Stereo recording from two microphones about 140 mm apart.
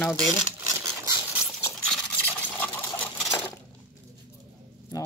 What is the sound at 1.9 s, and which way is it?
Sewing machine, 10° left (ahead or behind).